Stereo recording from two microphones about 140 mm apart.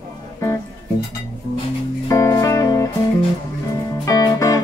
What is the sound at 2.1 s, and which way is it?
Music, 20° left (ahead or behind).